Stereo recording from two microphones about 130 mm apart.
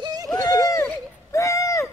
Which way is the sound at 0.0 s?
30° right (ahead or behind).